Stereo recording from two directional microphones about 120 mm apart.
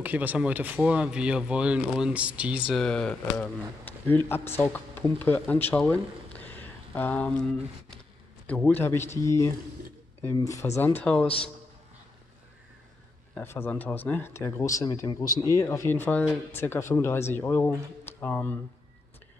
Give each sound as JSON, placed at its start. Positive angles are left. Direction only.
{"t": 0.0, "sound": "speech", "side_deg": -15}
{"t": 2.7, "sound": "speech", "side_deg": 5}
{"t": 8.5, "sound": "speech", "side_deg": 10}
{"t": 13.3, "sound": "speech", "side_deg": 20}